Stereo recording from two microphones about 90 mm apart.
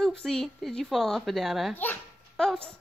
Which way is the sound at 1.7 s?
20° left (ahead or behind).